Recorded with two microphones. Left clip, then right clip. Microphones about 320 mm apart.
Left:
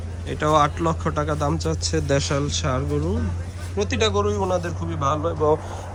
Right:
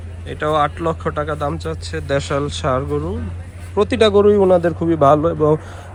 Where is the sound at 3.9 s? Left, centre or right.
Centre.